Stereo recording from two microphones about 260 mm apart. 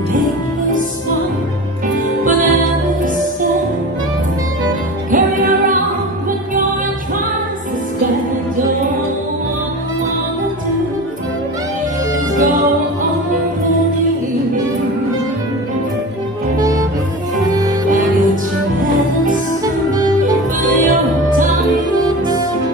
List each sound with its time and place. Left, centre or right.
5.1 s music: right
16.5 s music: centre
20.0 s music: centre
21.4 s music: right
21.9 s music: centre